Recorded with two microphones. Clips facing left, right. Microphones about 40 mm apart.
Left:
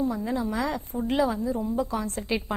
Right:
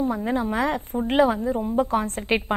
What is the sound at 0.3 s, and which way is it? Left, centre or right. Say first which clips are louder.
A woman's voice: right 4 dB; right.